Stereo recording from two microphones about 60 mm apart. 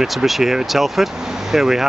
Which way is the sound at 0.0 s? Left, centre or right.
Centre.